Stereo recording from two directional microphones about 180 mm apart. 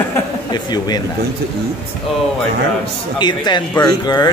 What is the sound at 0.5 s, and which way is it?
Speech, 20° left (ahead or behind).